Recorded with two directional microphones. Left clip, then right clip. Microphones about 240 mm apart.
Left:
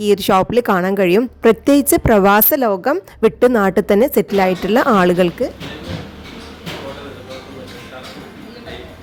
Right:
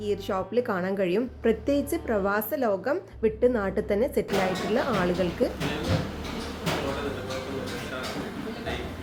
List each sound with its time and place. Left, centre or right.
0.0 s a woman's voice: left